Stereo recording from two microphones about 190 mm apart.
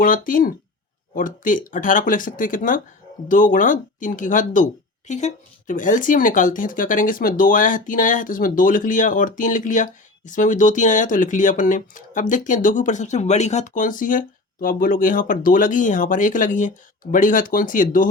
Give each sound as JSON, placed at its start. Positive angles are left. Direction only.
{"t": 0.0, "sound": "speech", "side_deg": 45}